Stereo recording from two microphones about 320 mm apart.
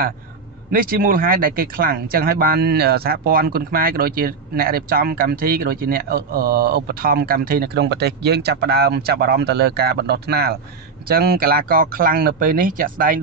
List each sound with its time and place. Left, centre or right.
0.7 s speech: right